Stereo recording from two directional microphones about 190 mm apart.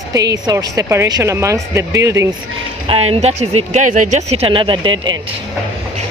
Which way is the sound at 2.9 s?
30° right (ahead or behind).